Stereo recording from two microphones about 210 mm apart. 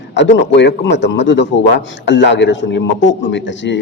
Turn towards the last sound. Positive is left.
turn(degrees=60)  # may be behind; listen again after turning